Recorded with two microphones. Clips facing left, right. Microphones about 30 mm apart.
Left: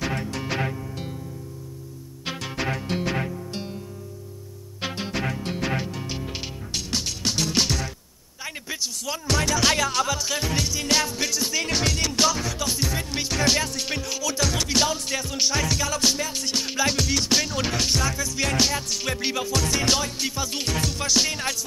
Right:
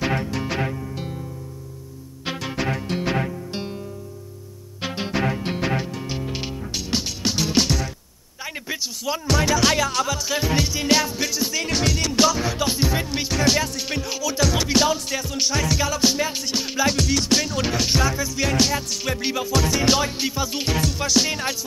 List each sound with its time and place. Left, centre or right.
0.0 s music: centre
2.2 s music: centre
3.0 s music: centre
4.9 s music: centre
5.7 s music: centre
8.5 s a sound: centre
9.3 s music: centre
10.4 s music: centre
12.4 s music: centre
13.0 s music: centre
17.8 s music: centre